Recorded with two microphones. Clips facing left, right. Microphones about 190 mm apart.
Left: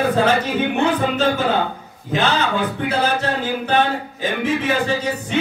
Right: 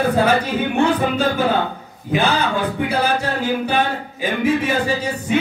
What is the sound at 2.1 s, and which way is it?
Speech, 10° right (ahead or behind).